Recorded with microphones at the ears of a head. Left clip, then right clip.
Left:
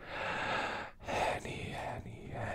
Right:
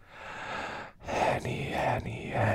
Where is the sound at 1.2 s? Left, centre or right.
Right.